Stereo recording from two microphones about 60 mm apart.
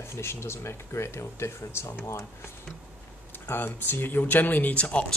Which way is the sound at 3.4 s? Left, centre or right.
Left.